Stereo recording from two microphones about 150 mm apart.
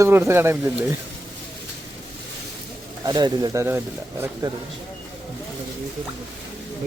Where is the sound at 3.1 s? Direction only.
25° right (ahead or behind).